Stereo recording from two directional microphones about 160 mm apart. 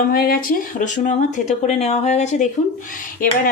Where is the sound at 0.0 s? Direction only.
70° left (ahead or behind).